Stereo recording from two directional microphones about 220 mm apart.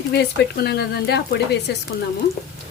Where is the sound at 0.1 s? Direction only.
50° left (ahead or behind).